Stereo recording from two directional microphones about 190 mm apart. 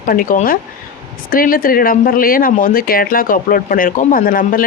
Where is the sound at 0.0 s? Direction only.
45° left (ahead or behind).